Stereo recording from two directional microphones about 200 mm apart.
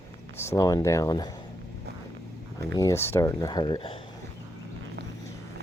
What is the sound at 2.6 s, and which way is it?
Speech, 15° left (ahead or behind).